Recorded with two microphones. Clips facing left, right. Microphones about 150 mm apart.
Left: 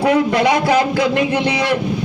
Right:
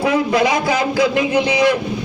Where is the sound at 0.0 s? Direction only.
65° left (ahead or behind).